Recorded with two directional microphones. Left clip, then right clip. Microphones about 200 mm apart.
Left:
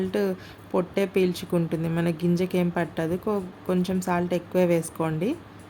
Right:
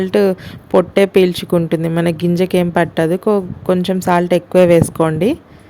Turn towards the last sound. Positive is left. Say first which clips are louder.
# right 13 dB
turn(degrees=-40)  # may be behind; listen again after turning